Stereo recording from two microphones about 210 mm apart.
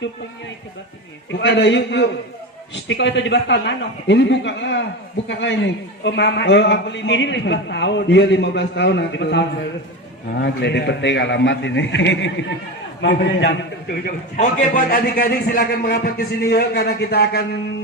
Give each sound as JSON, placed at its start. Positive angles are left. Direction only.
{"t": 1.3, "sound": "a man's voice", "side_deg": 55}